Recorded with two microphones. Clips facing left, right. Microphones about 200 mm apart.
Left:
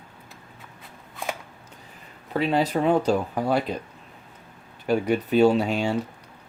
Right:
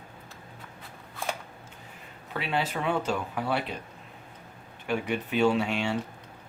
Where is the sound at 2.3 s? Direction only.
40° left (ahead or behind).